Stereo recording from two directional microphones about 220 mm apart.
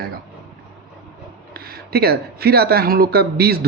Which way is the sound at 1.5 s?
45° right (ahead or behind).